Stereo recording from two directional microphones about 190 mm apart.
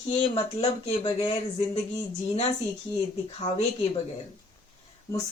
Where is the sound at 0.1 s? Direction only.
30° left (ahead or behind).